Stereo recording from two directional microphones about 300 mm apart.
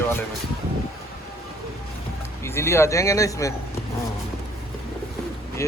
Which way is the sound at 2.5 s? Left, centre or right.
Centre.